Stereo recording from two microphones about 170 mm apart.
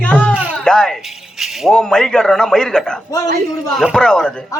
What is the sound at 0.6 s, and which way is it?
A child's voice, 5° left (ahead or behind).